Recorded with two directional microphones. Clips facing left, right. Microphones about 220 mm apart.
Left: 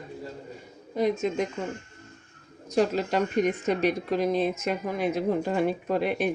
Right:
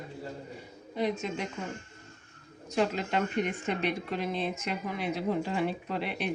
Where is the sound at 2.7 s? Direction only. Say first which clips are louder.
Left 5 dB; 40° left (ahead or behind).